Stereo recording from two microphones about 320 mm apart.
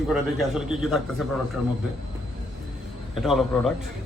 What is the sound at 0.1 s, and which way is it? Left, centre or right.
Speech, centre.